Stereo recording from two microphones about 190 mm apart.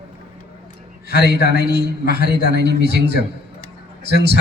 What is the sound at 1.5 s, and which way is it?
Speech, 60° right (ahead or behind).